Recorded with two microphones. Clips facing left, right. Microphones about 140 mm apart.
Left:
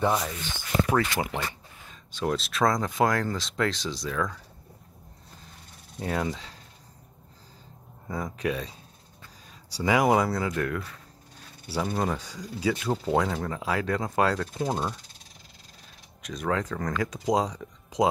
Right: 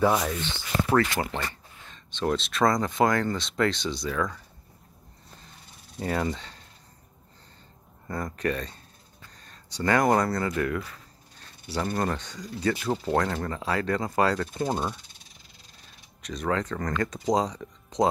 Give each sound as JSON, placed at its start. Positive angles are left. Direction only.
{"t": 0.0, "sound": "speech", "side_deg": 0}
{"t": 0.4, "sound": "speech", "side_deg": 10}
{"t": 5.9, "sound": "speech", "side_deg": 0}
{"t": 8.1, "sound": "speech", "side_deg": 5}
{"t": 16.2, "sound": "speech", "side_deg": 0}